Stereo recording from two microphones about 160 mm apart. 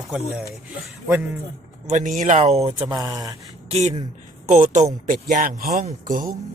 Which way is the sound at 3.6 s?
40° right (ahead or behind).